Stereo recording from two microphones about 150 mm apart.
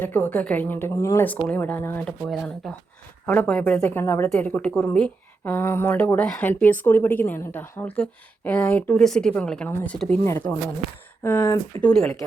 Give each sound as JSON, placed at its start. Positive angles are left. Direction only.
{"t": 0.0, "sound": "a woman's voice", "side_deg": 10}
{"t": 11.8, "sound": "a woman's voice", "side_deg": 5}